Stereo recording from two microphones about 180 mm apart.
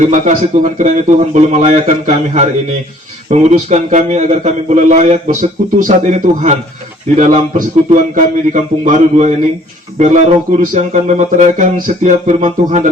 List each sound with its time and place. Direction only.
0.0 s a man's voice: 45° right (ahead or behind)